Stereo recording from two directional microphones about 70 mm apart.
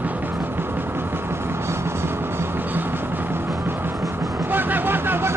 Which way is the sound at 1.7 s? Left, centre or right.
Right.